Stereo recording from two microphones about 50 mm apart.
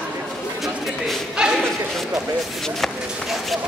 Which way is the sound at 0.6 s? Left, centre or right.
Centre.